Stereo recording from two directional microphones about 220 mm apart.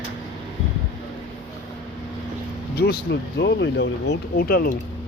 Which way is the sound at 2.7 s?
45° left (ahead or behind).